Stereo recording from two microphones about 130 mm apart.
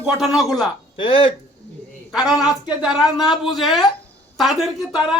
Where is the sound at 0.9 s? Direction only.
40° left (ahead or behind).